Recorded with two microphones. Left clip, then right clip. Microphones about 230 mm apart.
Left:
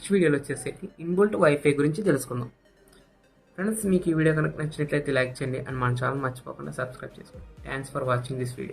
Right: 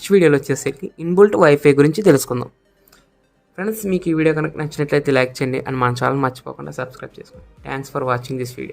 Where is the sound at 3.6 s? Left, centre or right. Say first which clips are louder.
Right 5 dB; right.